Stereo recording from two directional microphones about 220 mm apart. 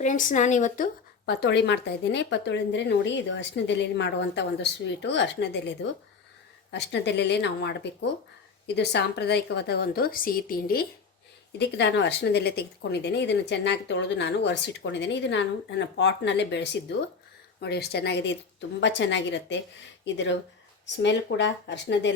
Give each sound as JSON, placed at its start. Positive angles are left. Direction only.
{"t": 0.0, "sound": "speech", "side_deg": 35}
{"t": 1.2, "sound": "a woman's voice", "side_deg": 50}
{"t": 11.6, "sound": "a woman's voice", "side_deg": 50}